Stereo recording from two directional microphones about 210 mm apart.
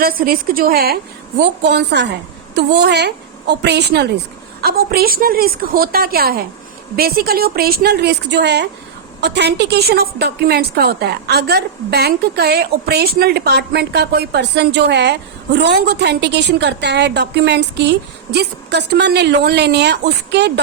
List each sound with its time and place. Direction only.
0.0 s a woman's voice: 45° right (ahead or behind)